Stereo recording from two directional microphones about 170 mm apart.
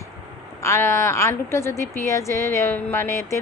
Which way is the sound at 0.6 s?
15° left (ahead or behind).